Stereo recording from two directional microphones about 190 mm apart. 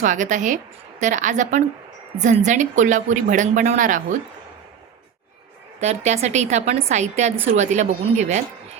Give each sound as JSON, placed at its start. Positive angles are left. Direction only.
{"t": 0.0, "sound": "a woman's voice", "side_deg": -40}
{"t": 5.8, "sound": "a woman's voice", "side_deg": -35}